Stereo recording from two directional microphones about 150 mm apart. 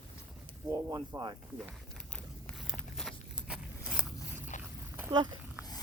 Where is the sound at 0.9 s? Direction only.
30° right (ahead or behind).